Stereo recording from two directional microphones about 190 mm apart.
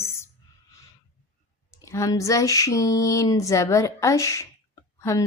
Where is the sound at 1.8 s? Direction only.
15° left (ahead or behind).